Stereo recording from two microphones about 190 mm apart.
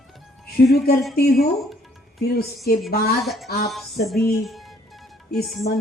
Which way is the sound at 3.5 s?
55° left (ahead or behind).